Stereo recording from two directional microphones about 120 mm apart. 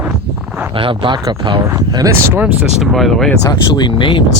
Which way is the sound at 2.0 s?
20° right (ahead or behind).